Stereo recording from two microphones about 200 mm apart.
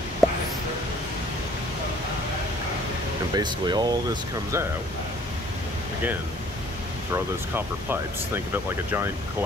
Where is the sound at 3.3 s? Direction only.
20° right (ahead or behind).